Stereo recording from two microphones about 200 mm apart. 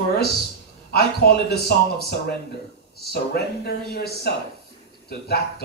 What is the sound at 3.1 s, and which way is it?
Music, 50° left (ahead or behind).